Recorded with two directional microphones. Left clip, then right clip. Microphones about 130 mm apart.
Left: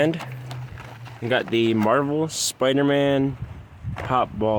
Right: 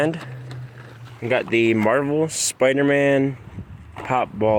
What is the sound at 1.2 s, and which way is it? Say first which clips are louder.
Speech: right 1 dB; 20° left (ahead or behind).